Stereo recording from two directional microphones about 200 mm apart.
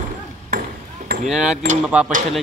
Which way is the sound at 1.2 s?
5° right (ahead or behind).